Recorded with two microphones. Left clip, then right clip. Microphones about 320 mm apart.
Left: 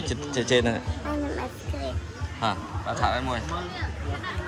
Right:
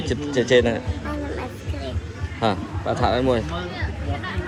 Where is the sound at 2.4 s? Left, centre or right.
Centre.